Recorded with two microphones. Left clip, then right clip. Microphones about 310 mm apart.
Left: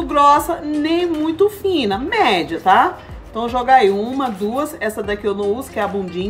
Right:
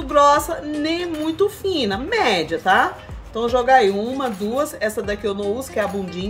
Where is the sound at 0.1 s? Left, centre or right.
Right.